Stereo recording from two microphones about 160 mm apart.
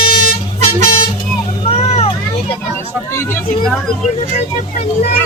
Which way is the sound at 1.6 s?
40° left (ahead or behind).